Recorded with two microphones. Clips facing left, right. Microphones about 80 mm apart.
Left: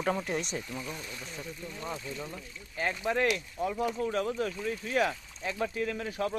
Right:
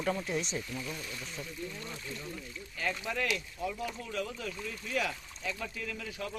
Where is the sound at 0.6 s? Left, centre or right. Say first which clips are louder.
Left 1 dB; left.